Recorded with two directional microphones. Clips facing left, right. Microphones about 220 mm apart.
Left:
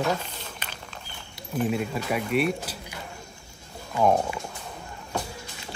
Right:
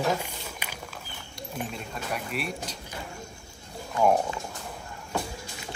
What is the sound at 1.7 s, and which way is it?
Speech, 5° left (ahead or behind).